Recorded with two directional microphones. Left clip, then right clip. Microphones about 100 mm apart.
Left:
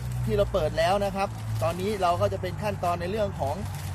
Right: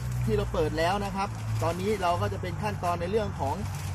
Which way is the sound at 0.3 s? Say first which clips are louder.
Left 3 dB; 45° left (ahead or behind).